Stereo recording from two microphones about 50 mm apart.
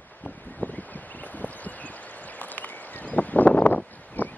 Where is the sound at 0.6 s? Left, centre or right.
Left.